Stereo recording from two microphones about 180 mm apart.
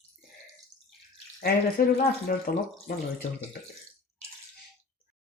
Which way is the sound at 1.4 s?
60° left (ahead or behind).